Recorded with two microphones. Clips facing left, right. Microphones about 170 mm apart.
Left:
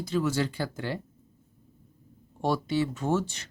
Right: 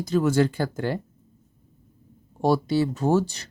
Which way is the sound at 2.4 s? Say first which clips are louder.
Right 5 dB; 40° right (ahead or behind).